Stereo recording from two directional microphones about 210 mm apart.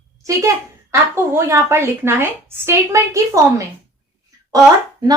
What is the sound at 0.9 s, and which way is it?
A woman's voice, 15° right (ahead or behind).